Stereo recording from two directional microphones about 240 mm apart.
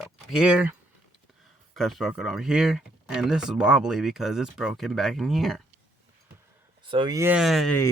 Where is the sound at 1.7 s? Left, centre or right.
Centre.